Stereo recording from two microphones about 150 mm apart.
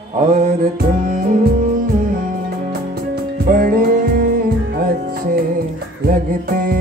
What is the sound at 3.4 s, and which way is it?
Music, 65° right (ahead or behind).